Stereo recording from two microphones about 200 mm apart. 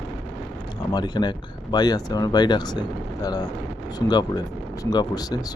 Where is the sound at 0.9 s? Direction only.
20° left (ahead or behind).